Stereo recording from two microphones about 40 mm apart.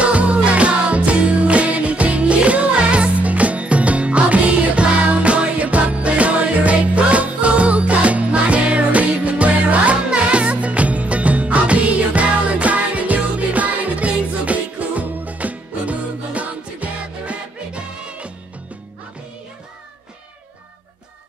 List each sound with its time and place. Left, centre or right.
0.0 s music: right